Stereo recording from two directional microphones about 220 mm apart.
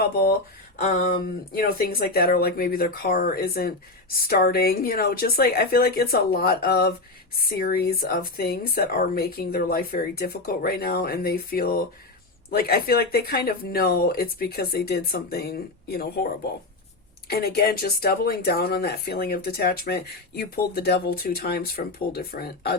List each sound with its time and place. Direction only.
0.0 s speech: 45° left (ahead or behind)
0.8 s a sound: 35° left (ahead or behind)
1.5 s speech: 45° left (ahead or behind)